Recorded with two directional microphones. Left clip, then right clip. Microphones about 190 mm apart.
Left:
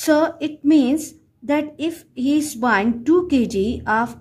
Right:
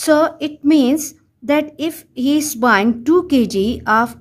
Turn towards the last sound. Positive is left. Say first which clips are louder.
# right 5 dB
turn(degrees=-35)  # may be behind; listen again after turning